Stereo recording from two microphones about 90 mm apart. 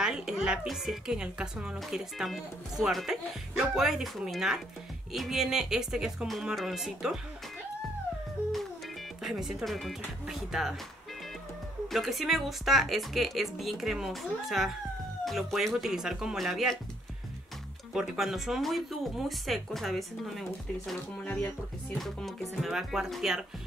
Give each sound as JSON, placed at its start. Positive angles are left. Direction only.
{"t": 0.0, "sound": "speech", "side_deg": -5}
{"t": 9.2, "sound": "speech", "side_deg": -5}
{"t": 11.9, "sound": "speech", "side_deg": 0}
{"t": 17.9, "sound": "speech", "side_deg": -5}
{"t": 21.2, "sound": "music", "side_deg": 10}
{"t": 21.9, "sound": "speech", "side_deg": 0}